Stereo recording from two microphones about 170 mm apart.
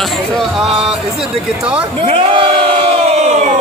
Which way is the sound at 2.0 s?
30° right (ahead or behind).